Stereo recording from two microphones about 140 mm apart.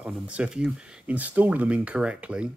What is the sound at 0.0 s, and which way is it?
Speech, 5° right (ahead or behind).